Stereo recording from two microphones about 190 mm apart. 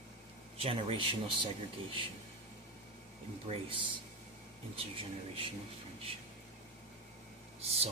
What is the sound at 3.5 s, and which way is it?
Speech, 30° right (ahead or behind).